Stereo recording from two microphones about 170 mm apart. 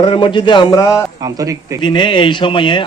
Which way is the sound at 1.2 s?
20° right (ahead or behind).